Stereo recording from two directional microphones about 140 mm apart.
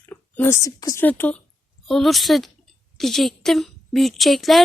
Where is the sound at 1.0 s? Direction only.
15° left (ahead or behind).